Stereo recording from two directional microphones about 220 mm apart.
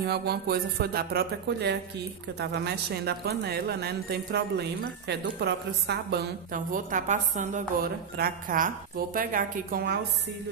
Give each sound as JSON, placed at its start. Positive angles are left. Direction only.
{"t": 0.0, "sound": "speech", "side_deg": -45}